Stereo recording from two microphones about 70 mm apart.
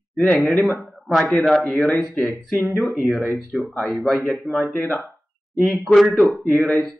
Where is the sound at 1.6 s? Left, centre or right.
Left.